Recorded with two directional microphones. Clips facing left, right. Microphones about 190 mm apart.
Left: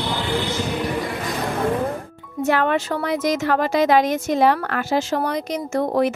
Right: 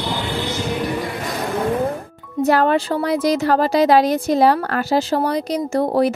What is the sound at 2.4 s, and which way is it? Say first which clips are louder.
A woman's voice: right 4 dB; 35° right (ahead or behind).